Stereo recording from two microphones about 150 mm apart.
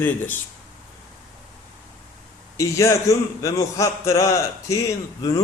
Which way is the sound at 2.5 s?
20° left (ahead or behind).